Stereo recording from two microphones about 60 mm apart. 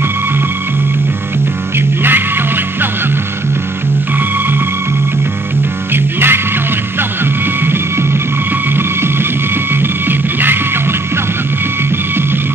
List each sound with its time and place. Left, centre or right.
2.0 s music: right
5.9 s music: right
8.7 s music: right